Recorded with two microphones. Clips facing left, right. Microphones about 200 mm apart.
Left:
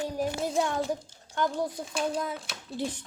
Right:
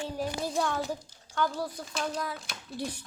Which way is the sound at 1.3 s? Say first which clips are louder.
Left 2 dB; 20° left (ahead or behind).